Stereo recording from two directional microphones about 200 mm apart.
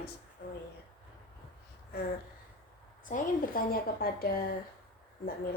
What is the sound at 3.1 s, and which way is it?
A woman's voice, 40° left (ahead or behind).